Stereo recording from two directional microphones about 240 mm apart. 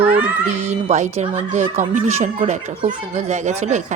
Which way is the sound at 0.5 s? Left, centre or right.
Right.